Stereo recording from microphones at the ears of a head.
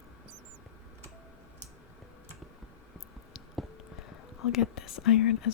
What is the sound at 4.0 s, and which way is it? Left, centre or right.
Whispering, left.